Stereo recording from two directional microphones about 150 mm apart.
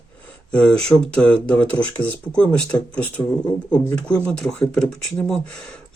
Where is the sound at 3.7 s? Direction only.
5° left (ahead or behind).